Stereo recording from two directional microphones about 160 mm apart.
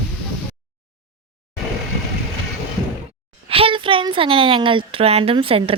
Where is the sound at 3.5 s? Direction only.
35° right (ahead or behind).